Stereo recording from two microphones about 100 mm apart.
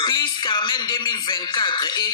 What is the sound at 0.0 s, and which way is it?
Speech, 50° left (ahead or behind).